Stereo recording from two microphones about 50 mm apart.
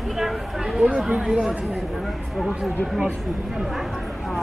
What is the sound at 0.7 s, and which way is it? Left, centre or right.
Speech, right.